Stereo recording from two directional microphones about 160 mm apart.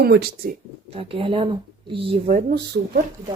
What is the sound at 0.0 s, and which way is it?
Speech, 90° right.